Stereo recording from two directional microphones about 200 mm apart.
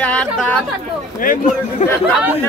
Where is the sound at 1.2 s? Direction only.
45° left (ahead or behind).